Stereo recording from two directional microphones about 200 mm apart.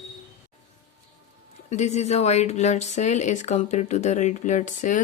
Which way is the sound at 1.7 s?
35° left (ahead or behind).